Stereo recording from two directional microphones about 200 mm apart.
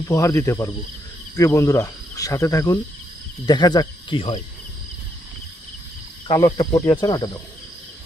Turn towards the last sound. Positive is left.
turn(degrees=20)  # may be behind; listen again after turning